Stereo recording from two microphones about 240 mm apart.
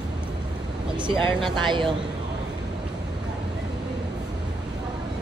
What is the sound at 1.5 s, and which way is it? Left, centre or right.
Speech, centre.